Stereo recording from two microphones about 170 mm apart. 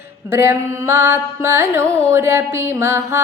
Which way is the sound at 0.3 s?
15° right (ahead or behind).